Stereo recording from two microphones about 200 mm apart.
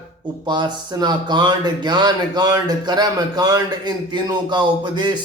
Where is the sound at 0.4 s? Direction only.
20° right (ahead or behind).